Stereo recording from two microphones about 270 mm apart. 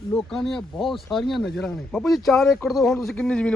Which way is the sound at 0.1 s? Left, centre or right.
Centre.